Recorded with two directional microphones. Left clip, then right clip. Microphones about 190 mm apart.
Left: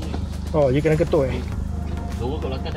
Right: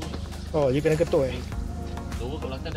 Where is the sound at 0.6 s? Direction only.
20° right (ahead or behind).